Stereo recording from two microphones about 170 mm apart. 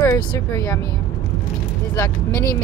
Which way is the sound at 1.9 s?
15° left (ahead or behind).